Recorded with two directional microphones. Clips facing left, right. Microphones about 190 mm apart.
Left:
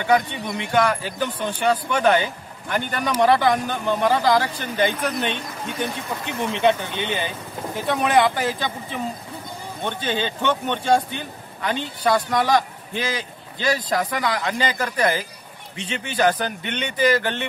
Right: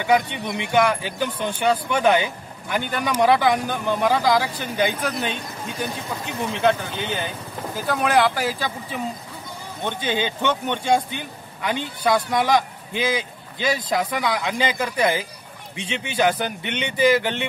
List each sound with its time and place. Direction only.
0.5 s speech: 15° right (ahead or behind)